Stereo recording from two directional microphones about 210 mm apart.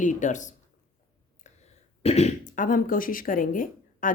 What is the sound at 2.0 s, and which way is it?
Speech, 30° left (ahead or behind).